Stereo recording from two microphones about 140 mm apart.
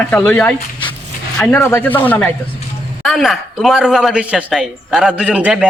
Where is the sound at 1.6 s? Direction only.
15° left (ahead or behind).